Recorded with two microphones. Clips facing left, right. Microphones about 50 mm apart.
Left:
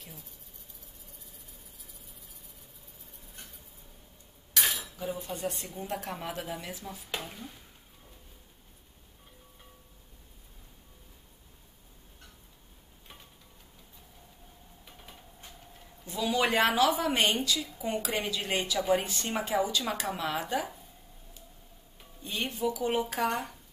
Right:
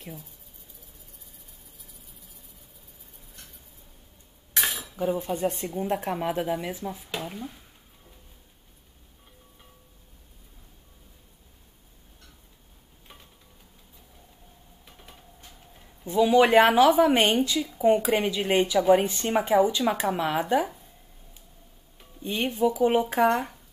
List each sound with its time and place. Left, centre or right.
4.9 s speech: right
7.2 s speech: centre
14.9 s a sound: centre
16.0 s speech: right
17.6 s speech: centre
17.8 s speech: right
22.2 s speech: right
23.3 s speech: centre